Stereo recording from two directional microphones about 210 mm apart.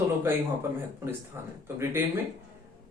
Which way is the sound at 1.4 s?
10° right (ahead or behind).